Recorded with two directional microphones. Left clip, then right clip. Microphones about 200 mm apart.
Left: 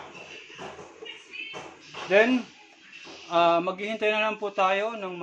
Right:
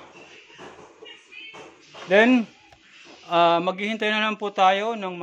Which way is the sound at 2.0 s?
55° right (ahead or behind).